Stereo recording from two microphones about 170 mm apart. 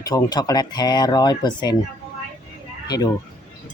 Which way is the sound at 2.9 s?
20° left (ahead or behind).